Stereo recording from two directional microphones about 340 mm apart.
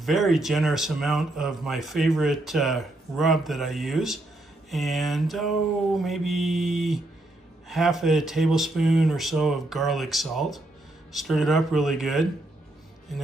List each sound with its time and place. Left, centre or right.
0.0 s speech: centre